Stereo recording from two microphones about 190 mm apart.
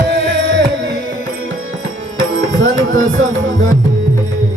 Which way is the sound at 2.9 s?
40° right (ahead or behind).